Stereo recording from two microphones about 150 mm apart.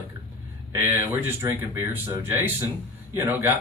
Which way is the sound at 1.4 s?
20° right (ahead or behind).